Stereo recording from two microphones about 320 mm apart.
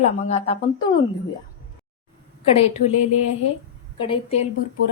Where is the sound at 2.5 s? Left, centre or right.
Centre.